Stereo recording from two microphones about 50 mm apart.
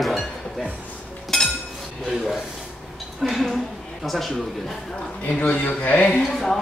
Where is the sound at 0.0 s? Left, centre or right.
Centre.